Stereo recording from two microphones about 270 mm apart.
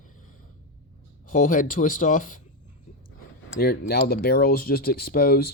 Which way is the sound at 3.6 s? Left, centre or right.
Left.